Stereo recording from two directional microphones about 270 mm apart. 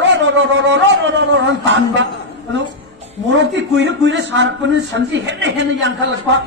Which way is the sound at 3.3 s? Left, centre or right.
Right.